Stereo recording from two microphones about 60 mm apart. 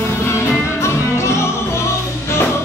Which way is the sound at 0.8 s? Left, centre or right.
Left.